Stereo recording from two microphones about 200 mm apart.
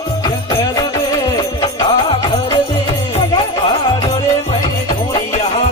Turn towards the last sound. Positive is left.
turn(degrees=30)  # may be behind; listen again after turning